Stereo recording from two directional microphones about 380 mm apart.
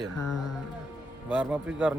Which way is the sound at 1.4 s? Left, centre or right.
Centre.